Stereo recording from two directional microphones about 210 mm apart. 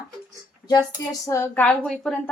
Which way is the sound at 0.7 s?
20° left (ahead or behind).